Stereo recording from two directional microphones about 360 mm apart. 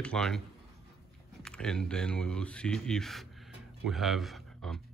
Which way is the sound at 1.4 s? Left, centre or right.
Centre.